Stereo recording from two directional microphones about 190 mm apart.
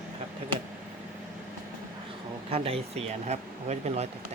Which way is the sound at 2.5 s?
30° right (ahead or behind).